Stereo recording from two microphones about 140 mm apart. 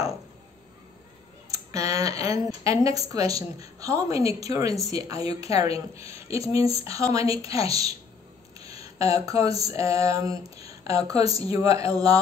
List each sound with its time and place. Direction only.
1.5 s a woman's voice: 25° right (ahead or behind)